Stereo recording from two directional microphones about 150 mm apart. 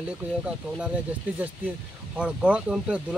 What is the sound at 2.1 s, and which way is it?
Speech, 10° right (ahead or behind).